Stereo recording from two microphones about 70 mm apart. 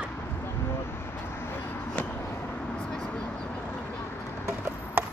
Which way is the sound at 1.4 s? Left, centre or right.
Left.